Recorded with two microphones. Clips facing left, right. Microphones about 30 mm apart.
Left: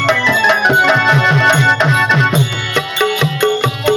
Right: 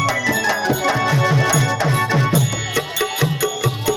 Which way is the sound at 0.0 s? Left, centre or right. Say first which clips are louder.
Left 7 dB; left.